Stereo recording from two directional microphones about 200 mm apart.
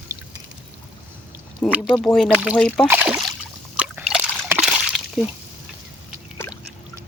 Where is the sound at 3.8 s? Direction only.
5° right (ahead or behind).